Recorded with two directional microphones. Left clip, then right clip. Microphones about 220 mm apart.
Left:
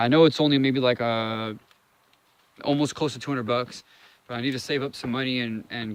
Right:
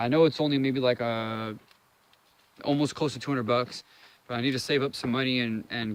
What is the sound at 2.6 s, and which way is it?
Speech, 15° left (ahead or behind).